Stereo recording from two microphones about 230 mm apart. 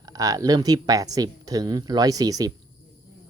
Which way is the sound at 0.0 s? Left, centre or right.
Centre.